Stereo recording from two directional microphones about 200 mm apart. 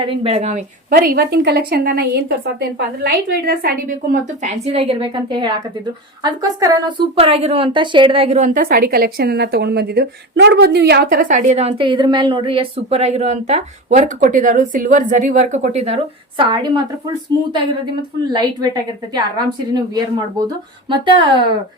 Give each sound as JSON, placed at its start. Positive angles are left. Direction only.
{"t": 0.0, "sound": "a woman's voice", "side_deg": -25}
{"t": 16.4, "sound": "a woman's voice", "side_deg": -20}